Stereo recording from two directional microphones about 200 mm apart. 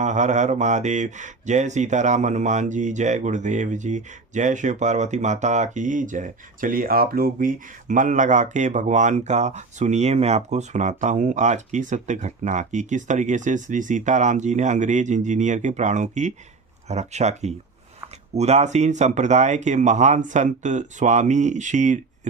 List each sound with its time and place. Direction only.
0.0 s speech: 35° right (ahead or behind)